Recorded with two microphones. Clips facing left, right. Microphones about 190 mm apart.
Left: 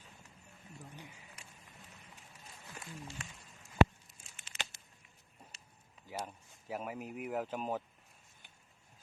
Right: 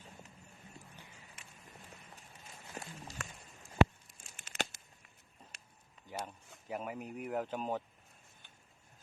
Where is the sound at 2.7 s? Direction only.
35° right (ahead or behind).